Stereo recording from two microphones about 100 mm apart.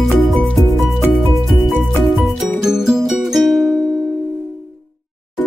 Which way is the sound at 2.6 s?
5° right (ahead or behind).